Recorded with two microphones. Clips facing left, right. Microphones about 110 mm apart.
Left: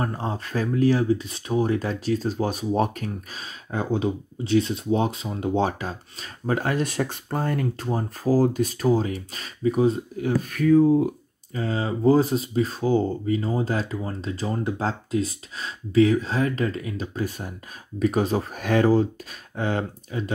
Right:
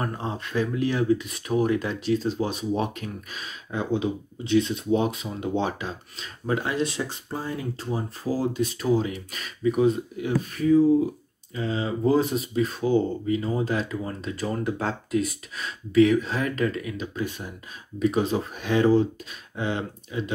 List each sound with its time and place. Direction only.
0.0 s speech: 35° left (ahead or behind)
10.5 s speech: 60° left (ahead or behind)
11.5 s speech: 40° left (ahead or behind)